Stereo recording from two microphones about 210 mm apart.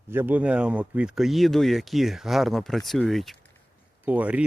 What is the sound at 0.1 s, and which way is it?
Speech, 10° right (ahead or behind).